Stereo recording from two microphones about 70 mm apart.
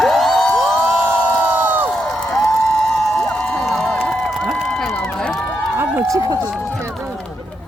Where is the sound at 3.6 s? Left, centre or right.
Centre.